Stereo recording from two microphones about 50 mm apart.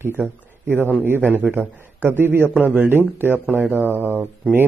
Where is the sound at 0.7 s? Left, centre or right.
Right.